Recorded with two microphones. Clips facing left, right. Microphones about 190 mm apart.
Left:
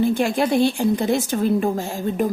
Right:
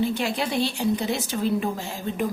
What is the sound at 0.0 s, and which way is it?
A woman's voice, 50° left (ahead or behind).